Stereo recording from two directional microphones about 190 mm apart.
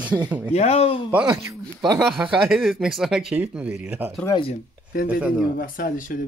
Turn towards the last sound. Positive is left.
turn(degrees=45)  # may be behind; listen again after turning